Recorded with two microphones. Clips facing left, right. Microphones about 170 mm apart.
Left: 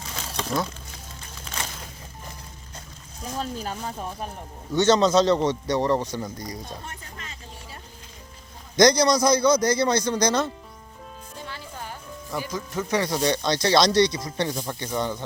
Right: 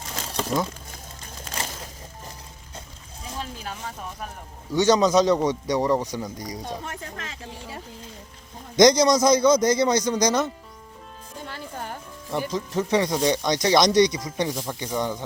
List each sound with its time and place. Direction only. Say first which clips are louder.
0.3 s a sound: right 2 dB; centre (ahead or behind)
4.7 s a man's voice: even; 15° right (ahead or behind)
6.7 s speech: right 5 dB; 90° right
8.7 s a man's voice: right 2 dB; 20° right (ahead or behind)
11.4 s music: right 4 dB; 50° right (ahead or behind)
12.5 s a man's voice: right 3 dB; 30° right (ahead or behind); by 14.5 s 15° right (ahead or behind)
14.5 s speech: even; centre (ahead or behind)
14.9 s a man's voice: right 1 dB; 15° right (ahead or behind)